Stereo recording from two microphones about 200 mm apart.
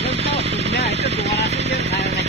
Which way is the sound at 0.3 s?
35° left (ahead or behind).